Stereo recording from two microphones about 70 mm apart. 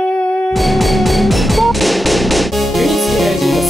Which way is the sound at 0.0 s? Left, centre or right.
Centre.